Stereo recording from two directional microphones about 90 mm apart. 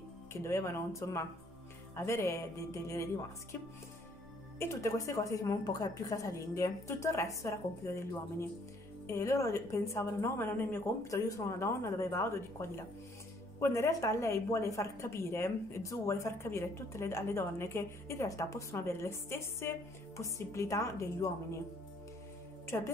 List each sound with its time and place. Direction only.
0.3 s a woman's voice: 30° left (ahead or behind)
4.6 s a woman's voice: 35° left (ahead or behind)
22.7 s a woman's voice: 30° left (ahead or behind)